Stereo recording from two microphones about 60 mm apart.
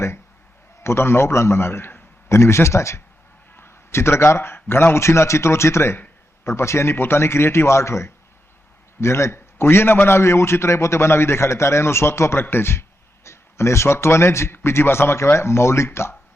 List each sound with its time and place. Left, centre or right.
0.8 s a man's voice: left
2.3 s a man's voice: left